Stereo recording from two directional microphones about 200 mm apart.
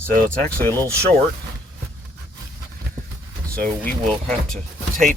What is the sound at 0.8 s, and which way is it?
Speech, 15° right (ahead or behind).